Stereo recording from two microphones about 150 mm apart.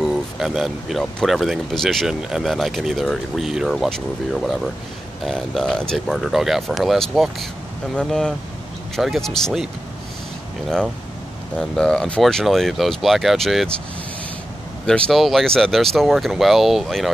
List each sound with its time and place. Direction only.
0.0 s speech: centre (ahead or behind)
11.5 s speech: 5° left (ahead or behind)
14.9 s speech: 5° left (ahead or behind)